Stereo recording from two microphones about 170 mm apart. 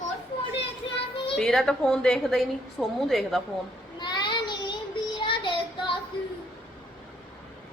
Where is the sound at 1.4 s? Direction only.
5° left (ahead or behind).